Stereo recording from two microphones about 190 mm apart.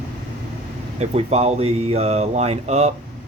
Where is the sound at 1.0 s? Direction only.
35° right (ahead or behind).